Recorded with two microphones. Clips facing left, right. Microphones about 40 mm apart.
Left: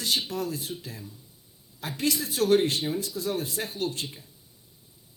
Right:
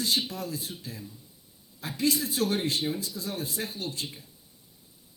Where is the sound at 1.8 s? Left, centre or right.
Left.